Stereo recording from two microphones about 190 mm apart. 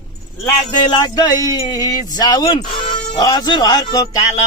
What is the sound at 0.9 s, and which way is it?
A man's voice, 20° left (ahead or behind).